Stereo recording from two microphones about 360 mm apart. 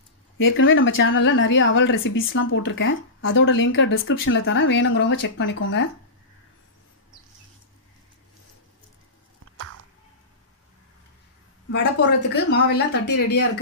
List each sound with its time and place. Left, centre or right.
0.4 s speech: left
12.4 s a woman's voice: left